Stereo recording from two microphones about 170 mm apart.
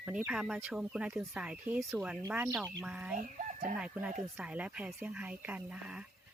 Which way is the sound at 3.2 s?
50° right (ahead or behind).